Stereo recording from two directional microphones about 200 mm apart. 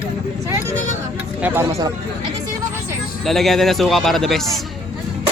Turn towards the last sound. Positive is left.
turn(degrees=0)  # may be behind; listen again after turning